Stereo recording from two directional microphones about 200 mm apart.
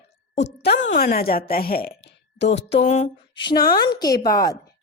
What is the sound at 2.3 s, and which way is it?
Speech, 60° left (ahead or behind).